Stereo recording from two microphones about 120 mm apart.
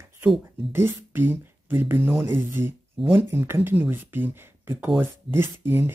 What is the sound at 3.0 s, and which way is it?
Speech, centre (ahead or behind).